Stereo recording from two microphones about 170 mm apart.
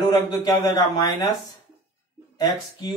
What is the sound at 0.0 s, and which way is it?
A man's voice, 25° left (ahead or behind).